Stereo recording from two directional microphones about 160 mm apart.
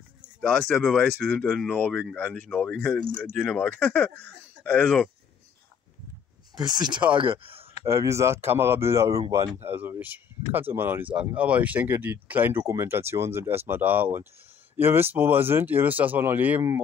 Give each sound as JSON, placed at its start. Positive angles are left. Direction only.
{"t": 0.4, "sound": "speech", "side_deg": 5}
{"t": 6.6, "sound": "speech", "side_deg": -25}
{"t": 7.8, "sound": "speech", "side_deg": -20}